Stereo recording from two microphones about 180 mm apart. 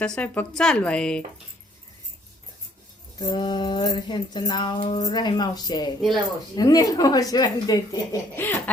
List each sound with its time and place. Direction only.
0.0 s a woman's voice: 5° left (ahead or behind)
3.2 s music: 25° left (ahead or behind)
8.4 s baby laughter: 10° left (ahead or behind)